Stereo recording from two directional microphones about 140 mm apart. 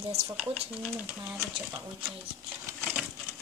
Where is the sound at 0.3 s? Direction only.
10° right (ahead or behind).